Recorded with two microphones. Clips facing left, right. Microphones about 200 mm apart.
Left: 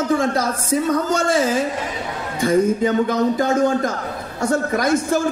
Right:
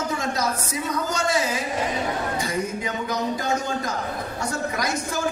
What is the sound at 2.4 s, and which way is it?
Speech, 50° left (ahead or behind).